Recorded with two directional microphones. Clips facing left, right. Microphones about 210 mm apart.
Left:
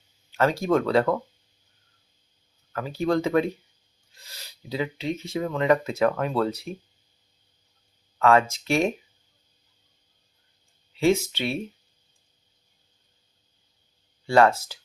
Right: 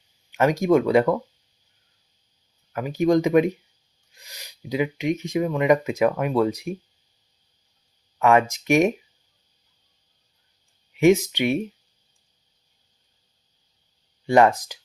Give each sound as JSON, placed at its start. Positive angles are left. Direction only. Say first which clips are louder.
{"t": 0.3, "sound": "speech", "louder": "right 4 dB", "side_deg": -15}
{"t": 2.7, "sound": "speech", "louder": "right 5 dB", "side_deg": -15}
{"t": 8.2, "sound": "speech", "louder": "right 1 dB", "side_deg": -15}
{"t": 10.9, "sound": "speech", "louder": "right 5 dB", "side_deg": -15}
{"t": 14.3, "sound": "speech", "louder": "right 2 dB", "side_deg": -15}